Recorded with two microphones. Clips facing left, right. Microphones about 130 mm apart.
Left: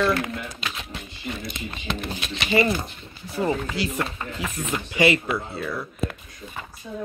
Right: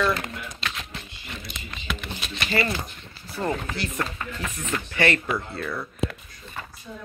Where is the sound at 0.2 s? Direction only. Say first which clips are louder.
Left 4 dB; 10° left (ahead or behind).